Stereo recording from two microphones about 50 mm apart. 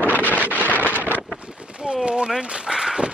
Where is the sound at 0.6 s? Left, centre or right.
Left.